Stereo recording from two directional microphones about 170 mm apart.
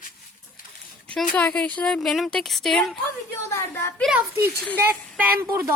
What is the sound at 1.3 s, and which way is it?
A woman's voice, 10° left (ahead or behind).